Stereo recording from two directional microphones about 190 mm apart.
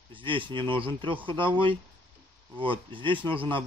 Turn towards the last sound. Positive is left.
turn(degrees=-25)  # may be behind; listen again after turning